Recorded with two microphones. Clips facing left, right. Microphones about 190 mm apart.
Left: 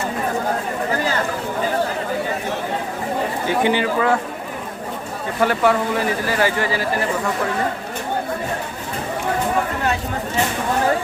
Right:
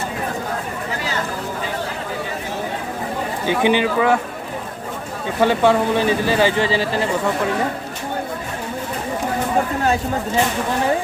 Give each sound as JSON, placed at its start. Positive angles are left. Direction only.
{"t": 3.6, "sound": "speech", "side_deg": -20}
{"t": 5.4, "sound": "speech", "side_deg": -25}